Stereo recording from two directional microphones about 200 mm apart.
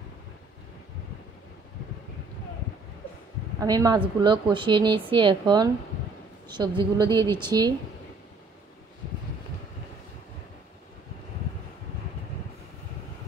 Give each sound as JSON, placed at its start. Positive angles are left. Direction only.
{"t": 3.5, "sound": "a woman's voice", "side_deg": -20}